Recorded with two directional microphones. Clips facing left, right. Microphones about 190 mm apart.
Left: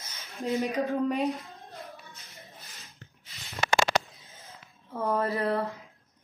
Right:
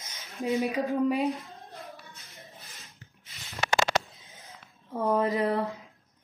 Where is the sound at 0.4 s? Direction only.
Centre (ahead or behind).